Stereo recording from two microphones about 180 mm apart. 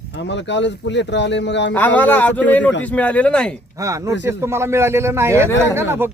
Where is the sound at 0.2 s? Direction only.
85° left.